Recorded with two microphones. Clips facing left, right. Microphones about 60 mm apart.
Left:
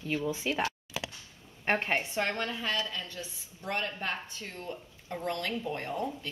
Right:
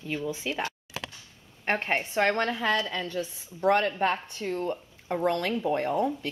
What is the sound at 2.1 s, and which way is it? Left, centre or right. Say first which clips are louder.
Speech: right 7 dB; right.